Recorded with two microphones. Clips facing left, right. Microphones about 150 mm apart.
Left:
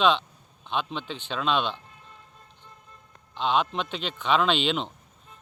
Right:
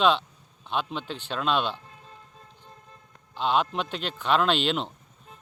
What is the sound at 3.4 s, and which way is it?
Speech, 5° right (ahead or behind).